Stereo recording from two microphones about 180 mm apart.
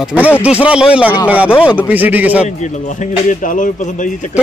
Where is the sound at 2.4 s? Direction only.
40° left (ahead or behind).